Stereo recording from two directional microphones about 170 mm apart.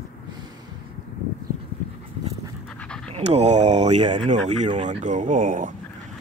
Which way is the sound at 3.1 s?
40° right (ahead or behind).